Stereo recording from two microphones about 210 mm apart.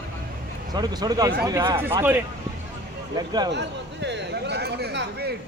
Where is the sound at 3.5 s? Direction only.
55° right (ahead or behind).